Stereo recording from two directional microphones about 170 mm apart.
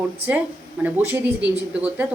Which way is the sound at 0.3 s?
10° right (ahead or behind).